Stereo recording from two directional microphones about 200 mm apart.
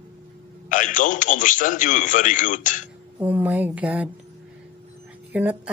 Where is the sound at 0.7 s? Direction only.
40° left (ahead or behind).